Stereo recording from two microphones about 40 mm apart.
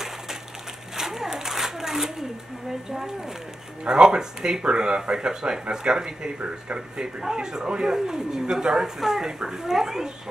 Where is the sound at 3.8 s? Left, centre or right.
Right.